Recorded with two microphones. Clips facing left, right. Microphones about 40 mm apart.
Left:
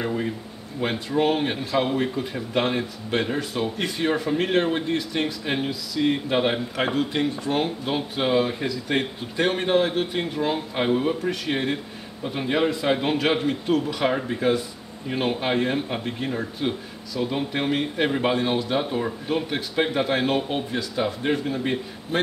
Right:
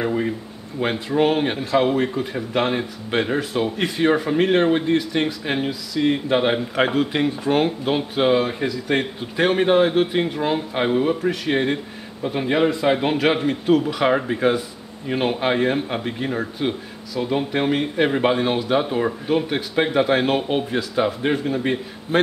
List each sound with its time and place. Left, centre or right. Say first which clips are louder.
0.0 s speech: right 4 dB; centre
14.1 s speech: right 4 dB; centre